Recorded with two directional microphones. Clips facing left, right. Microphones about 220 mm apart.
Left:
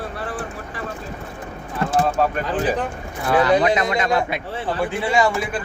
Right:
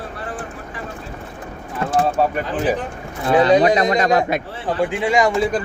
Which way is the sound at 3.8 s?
35° right (ahead or behind).